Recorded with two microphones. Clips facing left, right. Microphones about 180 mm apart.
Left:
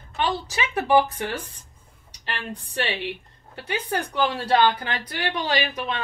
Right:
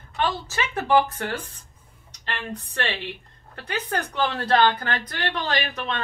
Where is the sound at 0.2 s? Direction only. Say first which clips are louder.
Even; 15° left (ahead or behind).